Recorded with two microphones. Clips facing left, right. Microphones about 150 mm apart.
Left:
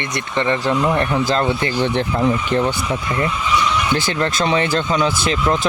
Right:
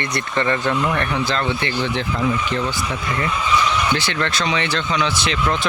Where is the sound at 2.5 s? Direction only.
55° left (ahead or behind).